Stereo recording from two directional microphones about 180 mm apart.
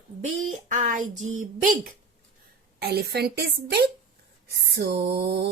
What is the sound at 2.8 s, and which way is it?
A woman's voice, 60° right (ahead or behind).